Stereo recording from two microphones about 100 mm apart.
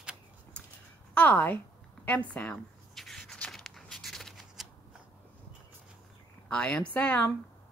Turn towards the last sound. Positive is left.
turn(degrees=15)  # may be behind; listen again after turning